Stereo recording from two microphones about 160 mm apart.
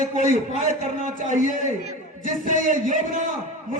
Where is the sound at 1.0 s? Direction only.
55° right (ahead or behind).